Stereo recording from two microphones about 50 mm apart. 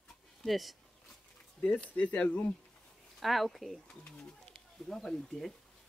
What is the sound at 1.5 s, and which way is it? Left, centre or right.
Speech, left.